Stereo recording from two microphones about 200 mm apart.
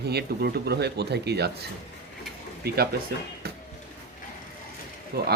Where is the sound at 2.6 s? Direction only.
50° right (ahead or behind).